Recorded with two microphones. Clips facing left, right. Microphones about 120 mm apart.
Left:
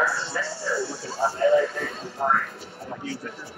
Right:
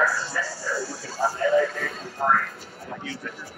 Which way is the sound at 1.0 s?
30° left (ahead or behind).